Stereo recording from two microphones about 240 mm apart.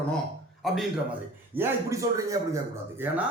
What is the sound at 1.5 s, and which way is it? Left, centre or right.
A man's voice, centre.